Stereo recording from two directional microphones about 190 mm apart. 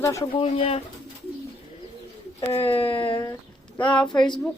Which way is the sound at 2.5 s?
30° left (ahead or behind).